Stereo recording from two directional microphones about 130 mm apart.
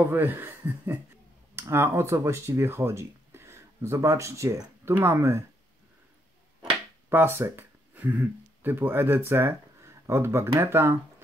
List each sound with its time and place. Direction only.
0.1 s speech: 15° right (ahead or behind)
6.7 s speech: 15° right (ahead or behind)